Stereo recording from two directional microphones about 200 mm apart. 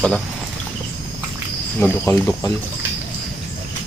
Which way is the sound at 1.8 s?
10° left (ahead or behind).